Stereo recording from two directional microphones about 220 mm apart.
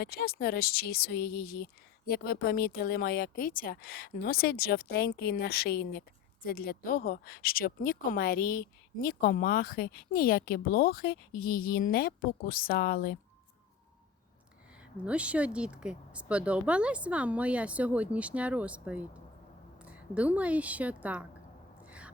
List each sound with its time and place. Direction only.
0.0 s a woman's voice: 45° left (ahead or behind)
14.9 s speech: 5° right (ahead or behind)
21.8 s a sound: 5° right (ahead or behind)